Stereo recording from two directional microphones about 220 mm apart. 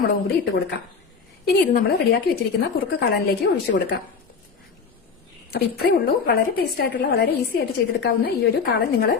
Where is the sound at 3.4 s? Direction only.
50° left (ahead or behind).